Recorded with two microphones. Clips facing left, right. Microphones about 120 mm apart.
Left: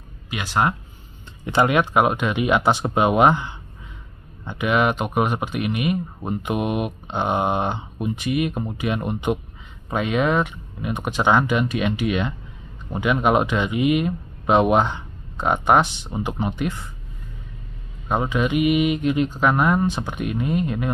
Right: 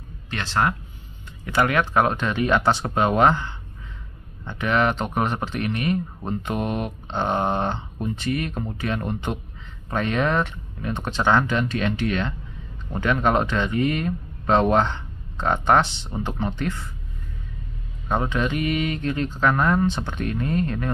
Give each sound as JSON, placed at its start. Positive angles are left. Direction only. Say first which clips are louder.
{"t": 0.3, "sound": "speech", "louder": "left 1 dB", "side_deg": 10}
{"t": 18.0, "sound": "speech", "louder": "left 2 dB", "side_deg": 5}